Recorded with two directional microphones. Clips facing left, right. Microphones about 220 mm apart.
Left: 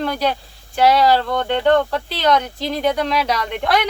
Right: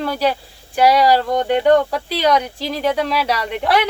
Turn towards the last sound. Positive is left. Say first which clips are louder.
# right 1 dB
turn(degrees=-5)  # may be behind; listen again after turning